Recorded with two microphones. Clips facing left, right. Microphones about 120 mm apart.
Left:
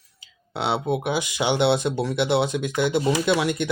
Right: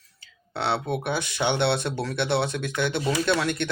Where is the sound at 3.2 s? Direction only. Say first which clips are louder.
Left 3 dB; 15° left (ahead or behind).